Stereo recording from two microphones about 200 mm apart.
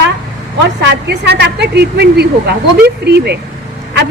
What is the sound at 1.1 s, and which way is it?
A woman's voice, 55° right (ahead or behind).